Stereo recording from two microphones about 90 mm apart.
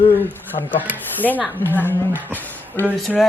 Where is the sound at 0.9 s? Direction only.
20° left (ahead or behind).